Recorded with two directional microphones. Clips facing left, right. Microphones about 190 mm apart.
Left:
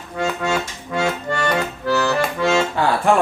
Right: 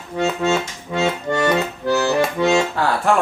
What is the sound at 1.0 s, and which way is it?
Accordion, 20° right (ahead or behind).